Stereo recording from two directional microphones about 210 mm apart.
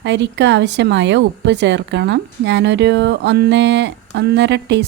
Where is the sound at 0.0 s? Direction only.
55° right (ahead or behind).